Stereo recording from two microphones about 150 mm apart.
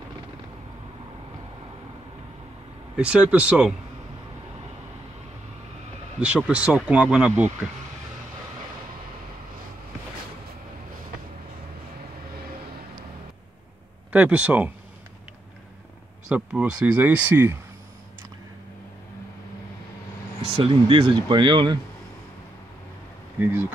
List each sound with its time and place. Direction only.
3.0 s speech: 10° right (ahead or behind)
6.1 s speech: 10° right (ahead or behind)
14.1 s speech: 10° right (ahead or behind)
16.3 s speech: 5° right (ahead or behind)
20.5 s speech: 35° right (ahead or behind)
23.4 s speech: 15° right (ahead or behind)